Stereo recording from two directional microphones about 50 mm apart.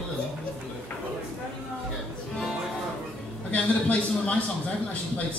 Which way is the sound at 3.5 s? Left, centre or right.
Left.